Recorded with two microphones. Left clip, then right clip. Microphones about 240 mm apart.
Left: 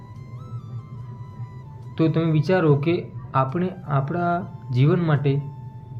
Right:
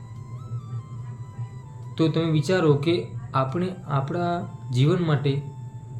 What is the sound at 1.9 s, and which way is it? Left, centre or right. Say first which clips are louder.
Speech: left 1 dB; centre.